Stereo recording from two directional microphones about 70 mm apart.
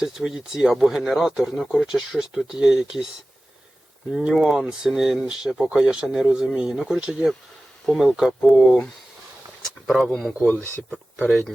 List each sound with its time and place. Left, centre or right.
0.0 s speech: centre
4.4 s speech: centre
10.0 s speech: centre
10.4 s speech: left
11.3 s speech: centre